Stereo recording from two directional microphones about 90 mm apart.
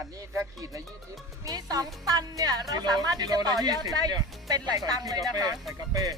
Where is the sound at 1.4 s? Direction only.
40° right (ahead or behind).